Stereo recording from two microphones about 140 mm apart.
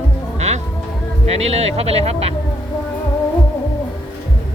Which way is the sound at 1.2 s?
50° right (ahead or behind).